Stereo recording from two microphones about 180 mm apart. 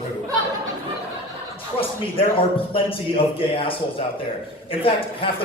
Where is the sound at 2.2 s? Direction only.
30° left (ahead or behind).